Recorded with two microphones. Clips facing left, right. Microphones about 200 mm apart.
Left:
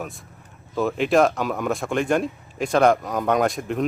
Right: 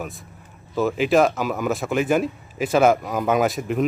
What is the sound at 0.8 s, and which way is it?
A man's voice, centre (ahead or behind).